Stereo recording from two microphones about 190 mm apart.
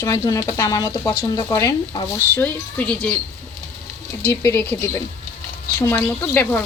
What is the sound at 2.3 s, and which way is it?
Speech, 10° left (ahead or behind).